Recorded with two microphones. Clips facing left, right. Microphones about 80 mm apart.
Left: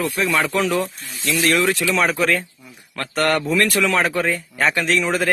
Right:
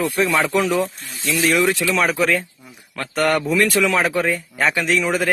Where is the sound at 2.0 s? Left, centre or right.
Centre.